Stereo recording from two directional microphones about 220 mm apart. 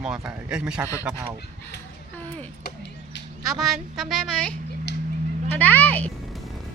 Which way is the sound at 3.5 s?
Centre (ahead or behind).